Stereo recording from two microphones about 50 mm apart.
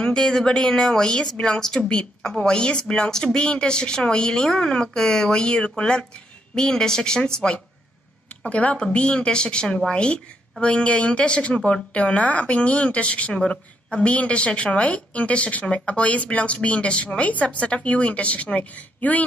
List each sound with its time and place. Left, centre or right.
0.0 s speech: centre
8.5 s a woman's voice: left